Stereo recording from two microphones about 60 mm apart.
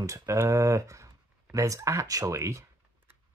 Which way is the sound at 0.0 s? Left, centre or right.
Right.